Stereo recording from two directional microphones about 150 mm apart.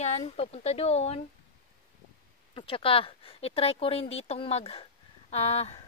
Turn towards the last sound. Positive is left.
turn(degrees=45)  # may be behind; listen again after turning